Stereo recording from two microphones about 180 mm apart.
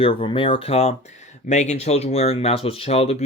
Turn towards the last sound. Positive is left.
turn(degrees=35)  # may be behind; listen again after turning